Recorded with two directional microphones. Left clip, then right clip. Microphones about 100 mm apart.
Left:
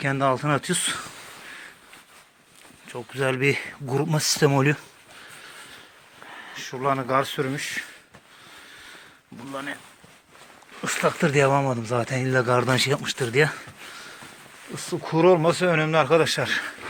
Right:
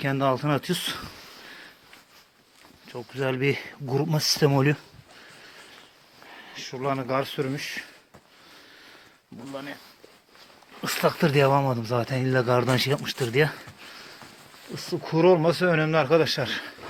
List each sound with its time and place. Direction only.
0.0 s speech: 40° right (ahead or behind)
3.1 s speech: 25° right (ahead or behind); by 4.8 s 40° right (ahead or behind)
6.2 s speech: 5° right (ahead or behind); by 7.9 s 25° right (ahead or behind)
10.8 s speech: 60° right (ahead or behind); by 13.7 s 45° right (ahead or behind)
14.7 s speech: 25° right (ahead or behind)
15.0 s speech: 40° right (ahead or behind)